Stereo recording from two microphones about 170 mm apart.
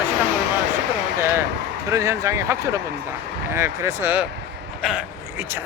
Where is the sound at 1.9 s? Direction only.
15° right (ahead or behind).